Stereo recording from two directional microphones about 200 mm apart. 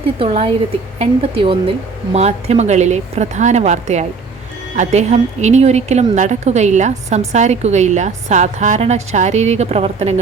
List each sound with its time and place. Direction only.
0.2 s a woman's voice: 25° right (ahead or behind)